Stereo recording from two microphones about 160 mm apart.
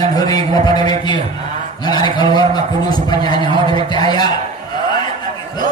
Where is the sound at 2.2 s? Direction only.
25° left (ahead or behind).